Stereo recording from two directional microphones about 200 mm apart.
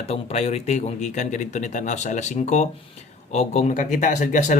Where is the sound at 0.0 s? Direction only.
30° left (ahead or behind).